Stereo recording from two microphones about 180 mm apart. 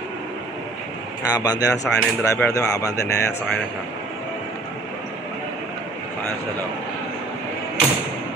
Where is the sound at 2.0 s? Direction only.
10° left (ahead or behind).